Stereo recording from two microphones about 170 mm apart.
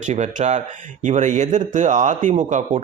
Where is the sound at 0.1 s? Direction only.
45° right (ahead or behind).